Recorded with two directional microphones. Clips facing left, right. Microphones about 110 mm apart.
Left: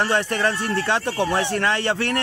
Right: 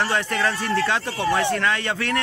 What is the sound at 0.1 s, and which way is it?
Speech, 25° left (ahead or behind).